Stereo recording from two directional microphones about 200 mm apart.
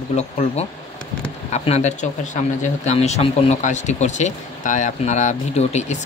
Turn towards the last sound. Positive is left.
turn(degrees=35)  # may be behind; listen again after turning